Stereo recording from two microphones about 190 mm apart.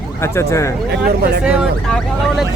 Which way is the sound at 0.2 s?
15° left (ahead or behind).